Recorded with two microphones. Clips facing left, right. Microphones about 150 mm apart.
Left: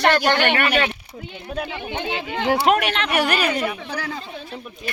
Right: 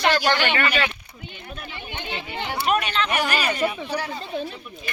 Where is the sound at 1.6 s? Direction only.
90° left; by 3.5 s 60° left (ahead or behind).